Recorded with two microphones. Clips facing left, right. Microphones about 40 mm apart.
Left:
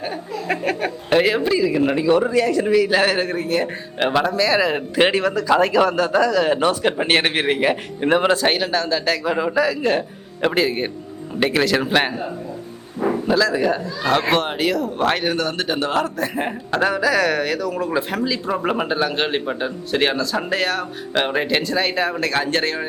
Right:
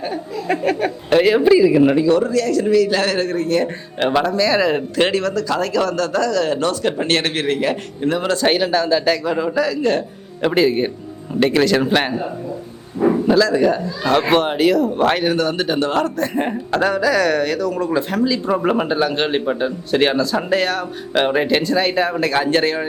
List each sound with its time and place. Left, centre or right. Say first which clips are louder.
0.0 s a sound: right 2 dB; centre
1.4 s speech: right 6 dB; centre
2.0 s a man's voice: right 1 dB; centre
4.9 s a man's voice: left 4 dB; centre
8.4 s speech: right 3 dB; centre
9.2 s a man's voice: even; centre